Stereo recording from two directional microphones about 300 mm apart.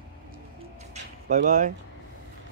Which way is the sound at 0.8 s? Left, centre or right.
Right.